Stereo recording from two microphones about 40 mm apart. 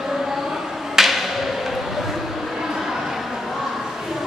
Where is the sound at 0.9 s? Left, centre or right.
Centre.